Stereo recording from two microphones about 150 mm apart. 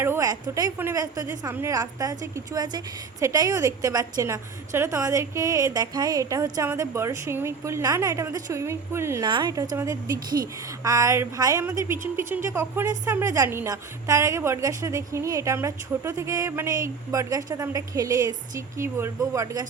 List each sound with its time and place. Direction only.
0.0 s a woman's voice: 20° right (ahead or behind)
9.2 s a woman's voice: 30° right (ahead or behind)